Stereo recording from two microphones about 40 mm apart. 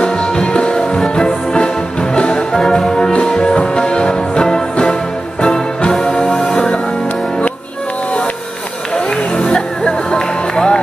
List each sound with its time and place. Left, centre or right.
0.0 s music: left
2.8 s music: centre
8.9 s music: left